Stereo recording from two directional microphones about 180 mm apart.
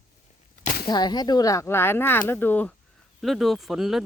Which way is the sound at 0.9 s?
25° left (ahead or behind).